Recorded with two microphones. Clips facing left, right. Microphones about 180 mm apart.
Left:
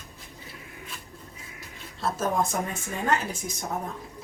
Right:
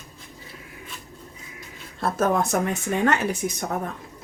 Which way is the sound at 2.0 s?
60° right (ahead or behind).